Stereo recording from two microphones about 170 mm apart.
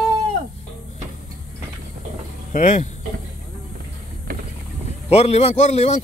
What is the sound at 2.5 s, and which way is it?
Speech, 45° left (ahead or behind).